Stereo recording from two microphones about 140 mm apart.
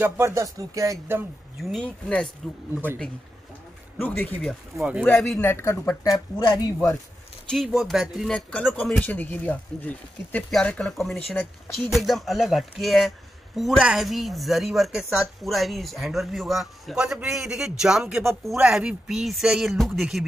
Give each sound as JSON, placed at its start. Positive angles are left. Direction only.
{"t": 0.0, "sound": "speech", "side_deg": -20}
{"t": 1.6, "sound": "a woman's voice", "side_deg": 0}
{"t": 4.0, "sound": "speech", "side_deg": 10}
{"t": 4.7, "sound": "speech", "side_deg": -10}
{"t": 5.1, "sound": "a woman's voice", "side_deg": 0}
{"t": 5.4, "sound": "speech", "side_deg": 20}
{"t": 7.4, "sound": "a woman's voice", "side_deg": 0}